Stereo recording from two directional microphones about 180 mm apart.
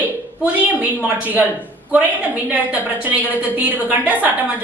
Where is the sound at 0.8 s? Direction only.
10° right (ahead or behind).